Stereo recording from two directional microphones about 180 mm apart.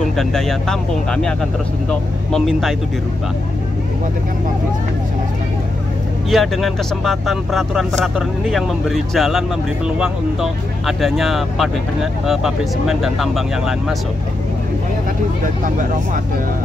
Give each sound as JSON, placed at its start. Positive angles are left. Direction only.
{"t": 0.2, "sound": "speech", "side_deg": 0}
{"t": 6.3, "sound": "speech", "side_deg": 0}
{"t": 15.6, "sound": "speech", "side_deg": -45}